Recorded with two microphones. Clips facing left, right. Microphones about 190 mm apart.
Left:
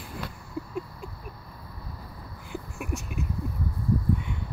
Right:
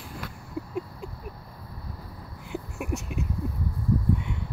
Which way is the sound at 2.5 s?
20° right (ahead or behind).